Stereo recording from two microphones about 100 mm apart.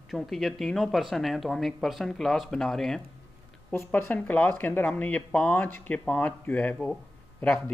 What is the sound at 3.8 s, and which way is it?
Speech, 20° left (ahead or behind).